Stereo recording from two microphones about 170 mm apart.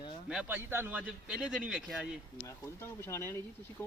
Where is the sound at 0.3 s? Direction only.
5° right (ahead or behind).